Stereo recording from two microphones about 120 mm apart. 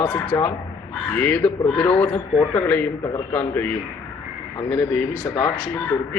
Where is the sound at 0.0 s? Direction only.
15° left (ahead or behind).